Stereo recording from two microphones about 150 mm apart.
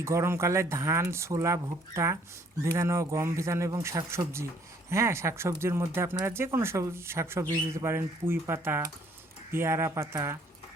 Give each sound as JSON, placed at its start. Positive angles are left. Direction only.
{"t": 0.0, "sound": "speech", "side_deg": -20}